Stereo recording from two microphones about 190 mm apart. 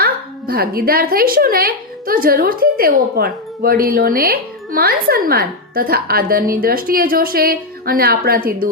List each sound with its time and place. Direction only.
0.0 s speech: 55° right (ahead or behind)